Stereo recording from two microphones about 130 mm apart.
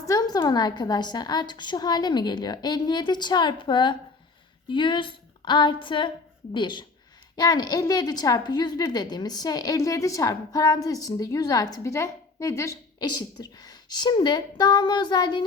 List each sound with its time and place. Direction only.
0.1 s a woman's voice: 30° left (ahead or behind)